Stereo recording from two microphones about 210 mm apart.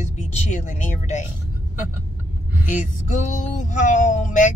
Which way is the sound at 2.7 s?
35° left (ahead or behind).